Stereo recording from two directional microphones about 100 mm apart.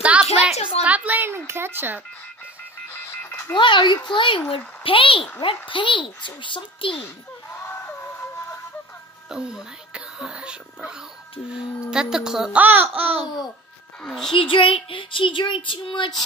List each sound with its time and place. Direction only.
0.0 s a sound: 10° right (ahead or behind)
1.5 s speech: 20° right (ahead or behind)
2.9 s music: 25° left (ahead or behind)
3.5 s child singing: 55° left (ahead or behind)
7.5 s vehicle: 25° left (ahead or behind)
9.3 s a woman's voice: 5° right (ahead or behind)
12.5 s a woman's voice: 20° right (ahead or behind)
14.0 s a woman's voice: 5° left (ahead or behind)
14.3 s child singing: 60° left (ahead or behind)